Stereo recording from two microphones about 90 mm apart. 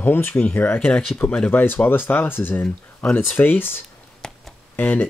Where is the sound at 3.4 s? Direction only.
25° left (ahead or behind).